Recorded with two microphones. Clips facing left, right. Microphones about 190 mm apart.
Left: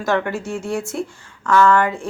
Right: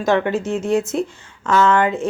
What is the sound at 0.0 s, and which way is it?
Speech, 20° right (ahead or behind).